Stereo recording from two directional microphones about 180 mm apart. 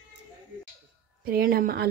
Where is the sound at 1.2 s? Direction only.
55° right (ahead or behind).